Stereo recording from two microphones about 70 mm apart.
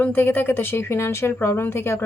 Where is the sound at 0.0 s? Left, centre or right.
Left.